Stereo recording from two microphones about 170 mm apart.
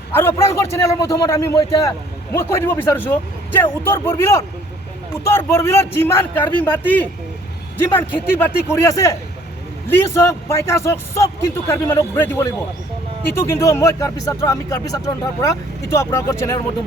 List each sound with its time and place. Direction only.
0.1 s speech: 15° left (ahead or behind)